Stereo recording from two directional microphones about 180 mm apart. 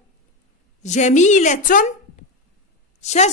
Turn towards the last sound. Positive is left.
turn(degrees=40)  # may be behind; listen again after turning